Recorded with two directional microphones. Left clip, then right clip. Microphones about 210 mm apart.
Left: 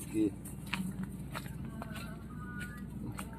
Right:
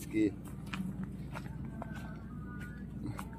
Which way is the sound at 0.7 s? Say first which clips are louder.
Left 4 dB; 35° left (ahead or behind).